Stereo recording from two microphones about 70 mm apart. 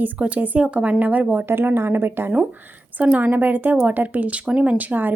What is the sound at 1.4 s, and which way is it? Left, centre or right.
A woman's voice, right.